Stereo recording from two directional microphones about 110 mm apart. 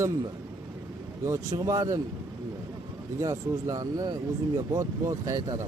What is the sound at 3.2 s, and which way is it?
Speech, 30° right (ahead or behind).